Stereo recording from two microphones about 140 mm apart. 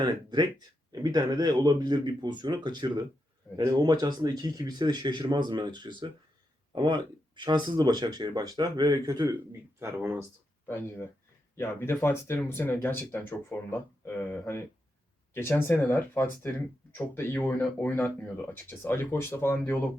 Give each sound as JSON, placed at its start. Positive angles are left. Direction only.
{"t": 0.0, "sound": "speech", "side_deg": -30}
{"t": 10.7, "sound": "speech", "side_deg": 15}